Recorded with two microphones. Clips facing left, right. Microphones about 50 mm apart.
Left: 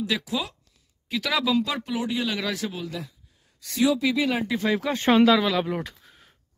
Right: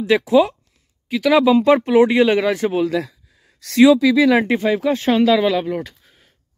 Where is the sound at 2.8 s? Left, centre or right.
Right.